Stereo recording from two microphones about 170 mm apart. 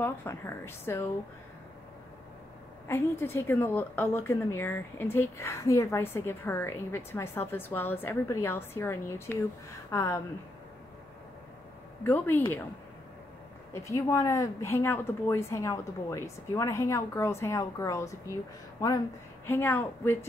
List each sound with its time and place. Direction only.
0.0 s a woman's voice: 15° left (ahead or behind)
2.9 s a woman's voice: 15° left (ahead or behind)
12.0 s a woman's voice: 10° left (ahead or behind)
13.7 s a woman's voice: 20° left (ahead or behind)
19.4 s a woman's voice: 10° left (ahead or behind)